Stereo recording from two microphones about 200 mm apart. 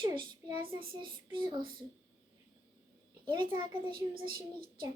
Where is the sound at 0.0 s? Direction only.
20° right (ahead or behind).